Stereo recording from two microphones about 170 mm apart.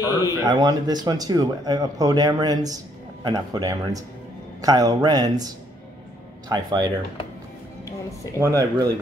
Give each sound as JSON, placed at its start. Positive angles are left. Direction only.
{"t": 0.0, "sound": "a man's voice", "side_deg": 20}
{"t": 0.5, "sound": "speech", "side_deg": -25}
{"t": 6.5, "sound": "speech", "side_deg": -25}
{"t": 8.4, "sound": "speech", "side_deg": -20}